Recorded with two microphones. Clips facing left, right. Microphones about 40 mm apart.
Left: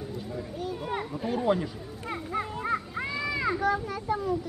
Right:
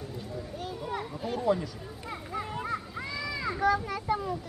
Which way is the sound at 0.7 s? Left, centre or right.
Left.